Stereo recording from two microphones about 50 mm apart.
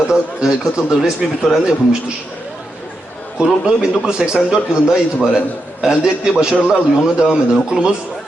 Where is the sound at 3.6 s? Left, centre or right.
Centre.